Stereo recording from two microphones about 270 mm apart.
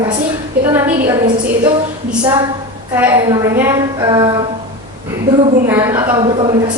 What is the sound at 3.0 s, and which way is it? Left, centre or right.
A woman's voice, centre.